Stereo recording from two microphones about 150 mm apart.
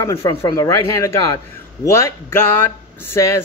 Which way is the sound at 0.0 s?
20° left (ahead or behind).